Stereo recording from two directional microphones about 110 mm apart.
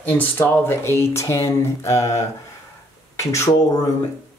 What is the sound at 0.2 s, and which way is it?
Speech, 20° left (ahead or behind).